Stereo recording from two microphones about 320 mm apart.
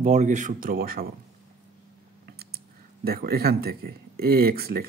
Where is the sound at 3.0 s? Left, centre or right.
Right.